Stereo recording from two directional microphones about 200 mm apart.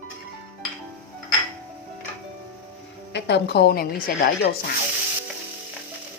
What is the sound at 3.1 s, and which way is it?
A woman's voice, 60° left (ahead or behind).